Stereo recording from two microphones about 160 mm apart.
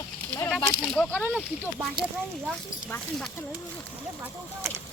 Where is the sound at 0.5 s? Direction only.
5° left (ahead or behind).